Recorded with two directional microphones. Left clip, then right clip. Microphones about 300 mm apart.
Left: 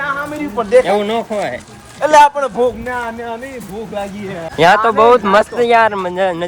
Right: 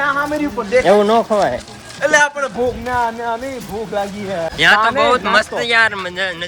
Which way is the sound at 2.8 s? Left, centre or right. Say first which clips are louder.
Right 3 dB; centre.